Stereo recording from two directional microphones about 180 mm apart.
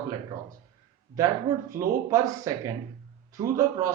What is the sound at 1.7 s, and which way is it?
Speech, 20° right (ahead or behind).